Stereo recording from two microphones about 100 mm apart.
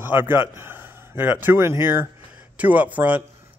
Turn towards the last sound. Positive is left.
turn(degrees=-15)  # may be behind; listen again after turning